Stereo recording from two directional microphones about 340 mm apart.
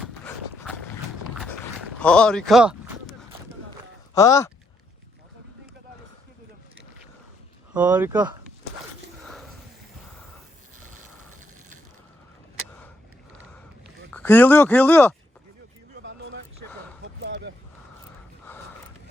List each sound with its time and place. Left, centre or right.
2.0 s a sound: centre
4.1 s speech: centre
7.7 s speech: centre
9.2 s sniff: centre
14.1 s speech: centre
16.0 s music: right
17.0 s a sound: right